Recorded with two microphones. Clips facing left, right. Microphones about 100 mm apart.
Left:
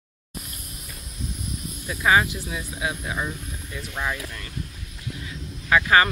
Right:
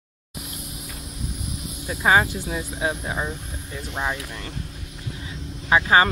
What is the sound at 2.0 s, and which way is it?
Speech, 30° right (ahead or behind).